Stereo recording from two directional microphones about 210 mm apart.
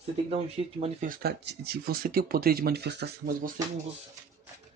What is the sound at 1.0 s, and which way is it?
Speech, 45° right (ahead or behind).